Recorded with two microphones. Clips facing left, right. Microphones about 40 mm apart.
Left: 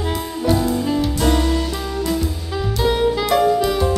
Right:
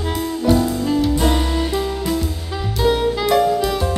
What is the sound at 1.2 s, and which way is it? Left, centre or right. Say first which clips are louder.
Music: left 1 dB; centre.